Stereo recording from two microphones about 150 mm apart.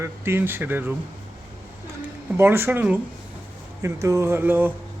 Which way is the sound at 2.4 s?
15° right (ahead or behind).